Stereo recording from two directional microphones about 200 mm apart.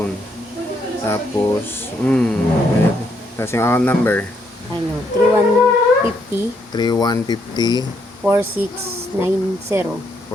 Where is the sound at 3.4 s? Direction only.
15° left (ahead or behind).